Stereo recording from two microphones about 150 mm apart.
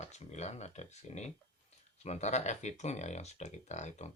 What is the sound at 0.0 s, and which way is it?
Speech, 50° left (ahead or behind).